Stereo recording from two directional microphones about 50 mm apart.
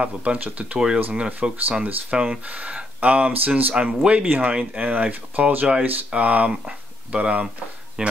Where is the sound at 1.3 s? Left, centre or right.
Right.